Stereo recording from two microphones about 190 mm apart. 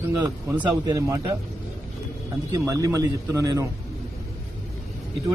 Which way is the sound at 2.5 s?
15° right (ahead or behind).